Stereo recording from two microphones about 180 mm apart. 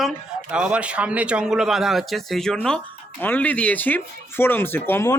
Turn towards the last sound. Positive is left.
turn(degrees=15)  # may be behind; listen again after turning